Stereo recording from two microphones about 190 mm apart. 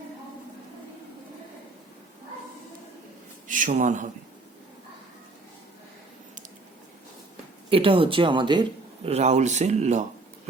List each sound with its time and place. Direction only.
3.4 s a man's voice: 45° right (ahead or behind)
7.7 s speech: 30° right (ahead or behind)
9.0 s a man's voice: 35° right (ahead or behind)